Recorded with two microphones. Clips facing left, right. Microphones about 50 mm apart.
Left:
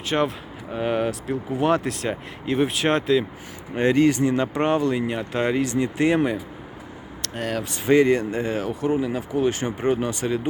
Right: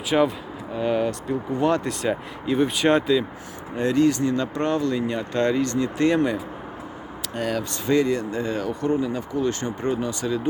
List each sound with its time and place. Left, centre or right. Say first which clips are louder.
0.1 s speech: right 3 dB; centre
0.7 s speech: right 1 dB; left
1.3 s speech: left 1 dB; centre
3.8 s speech: left 2 dB; left
4.3 s speech: left 2 dB; centre
8.0 s speech: left 3 dB; left
9.9 s speech: left 1 dB; left